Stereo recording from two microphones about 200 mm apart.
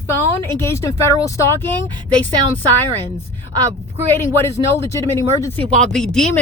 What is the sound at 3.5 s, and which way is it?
Speech, 15° right (ahead or behind).